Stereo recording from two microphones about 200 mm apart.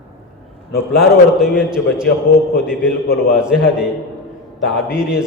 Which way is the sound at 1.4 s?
5° right (ahead or behind).